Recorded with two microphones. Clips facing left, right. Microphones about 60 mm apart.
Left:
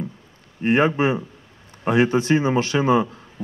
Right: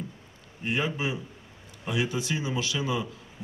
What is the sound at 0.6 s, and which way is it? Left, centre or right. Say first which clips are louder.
A man's voice: left 11 dB; left.